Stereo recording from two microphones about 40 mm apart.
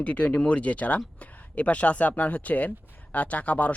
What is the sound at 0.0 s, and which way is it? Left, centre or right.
Speech, left.